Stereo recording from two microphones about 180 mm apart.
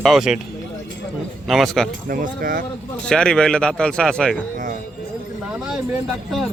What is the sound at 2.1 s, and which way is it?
Speech, 50° right (ahead or behind).